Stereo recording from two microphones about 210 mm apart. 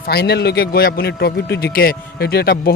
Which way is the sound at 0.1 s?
50° left (ahead or behind).